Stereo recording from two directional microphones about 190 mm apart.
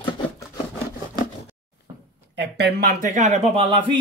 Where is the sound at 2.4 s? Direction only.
60° right (ahead or behind).